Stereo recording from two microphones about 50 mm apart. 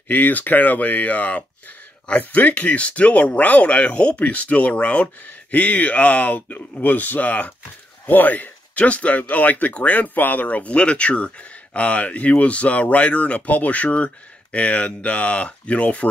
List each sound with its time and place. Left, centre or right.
0.1 s speech: left